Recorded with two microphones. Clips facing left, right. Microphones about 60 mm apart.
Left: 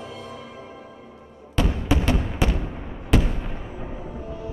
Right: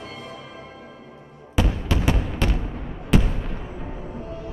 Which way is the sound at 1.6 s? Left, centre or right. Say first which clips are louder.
Right 1 dB; centre.